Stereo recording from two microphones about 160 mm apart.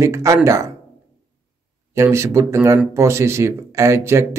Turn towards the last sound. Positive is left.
turn(degrees=-15)  # may be behind; listen again after turning